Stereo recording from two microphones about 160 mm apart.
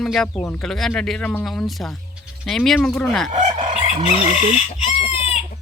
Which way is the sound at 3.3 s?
45° right (ahead or behind).